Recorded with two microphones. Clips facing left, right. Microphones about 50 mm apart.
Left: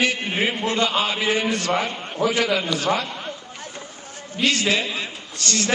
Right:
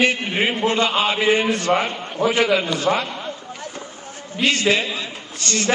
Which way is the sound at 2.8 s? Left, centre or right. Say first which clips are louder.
Right 2 dB; right.